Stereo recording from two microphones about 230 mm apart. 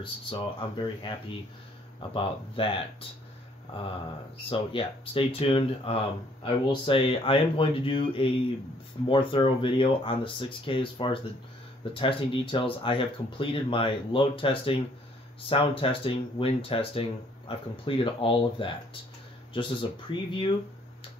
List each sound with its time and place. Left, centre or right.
0.0 s speech: left
4.5 s speech: left